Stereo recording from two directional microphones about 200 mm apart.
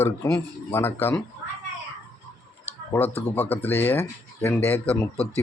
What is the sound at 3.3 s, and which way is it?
Speech, 10° left (ahead or behind).